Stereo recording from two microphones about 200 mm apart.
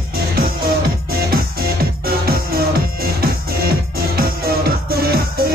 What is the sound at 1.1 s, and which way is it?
Music, 50° right (ahead or behind).